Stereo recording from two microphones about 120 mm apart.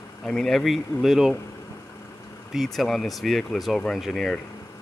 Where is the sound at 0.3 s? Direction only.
5° left (ahead or behind).